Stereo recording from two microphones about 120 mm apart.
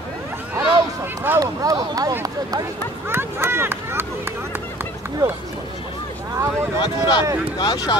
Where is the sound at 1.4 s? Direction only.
30° right (ahead or behind).